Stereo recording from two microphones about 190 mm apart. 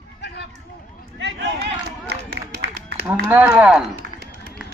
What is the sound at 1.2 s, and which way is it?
Run, 70° right (ahead or behind).